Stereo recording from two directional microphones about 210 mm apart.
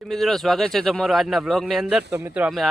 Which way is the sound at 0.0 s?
Centre (ahead or behind).